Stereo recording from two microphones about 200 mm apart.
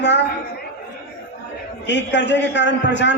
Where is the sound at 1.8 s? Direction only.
60° left (ahead or behind).